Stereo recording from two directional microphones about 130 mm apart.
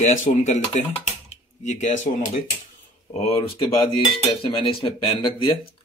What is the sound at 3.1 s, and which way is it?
Speech, 45° left (ahead or behind).